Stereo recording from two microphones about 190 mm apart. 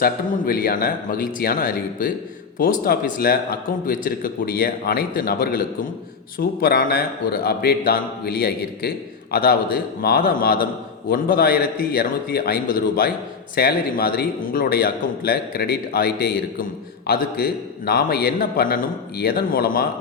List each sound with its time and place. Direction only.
0.0 s a man's voice: 50° left (ahead or behind)